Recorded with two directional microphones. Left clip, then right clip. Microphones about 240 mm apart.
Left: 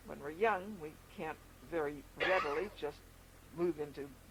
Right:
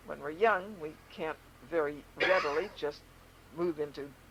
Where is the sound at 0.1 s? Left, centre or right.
Left.